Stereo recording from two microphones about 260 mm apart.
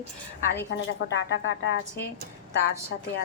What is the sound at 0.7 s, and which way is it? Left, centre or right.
Speech, left.